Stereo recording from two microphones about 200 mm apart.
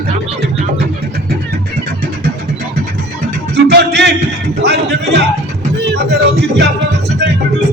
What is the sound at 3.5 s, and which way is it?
Music, 55° right (ahead or behind).